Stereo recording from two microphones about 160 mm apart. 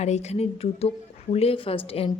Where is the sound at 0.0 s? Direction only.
45° left (ahead or behind).